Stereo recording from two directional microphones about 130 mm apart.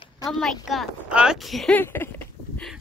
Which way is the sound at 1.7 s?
15° left (ahead or behind).